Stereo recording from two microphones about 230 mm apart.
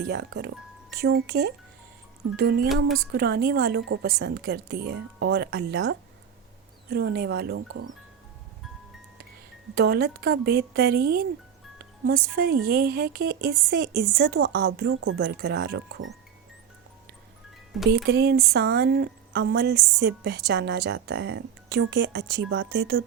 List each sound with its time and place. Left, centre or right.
0.0 s speech: right
7.7 s speech: right
9.7 s speech: right
18.0 s speech: right